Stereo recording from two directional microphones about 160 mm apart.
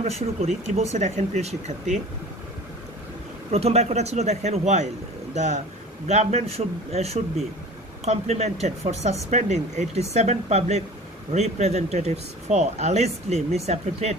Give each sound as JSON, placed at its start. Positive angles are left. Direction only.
{"t": 0.0, "sound": "speech", "side_deg": -40}
{"t": 3.5, "sound": "a man's voice", "side_deg": -40}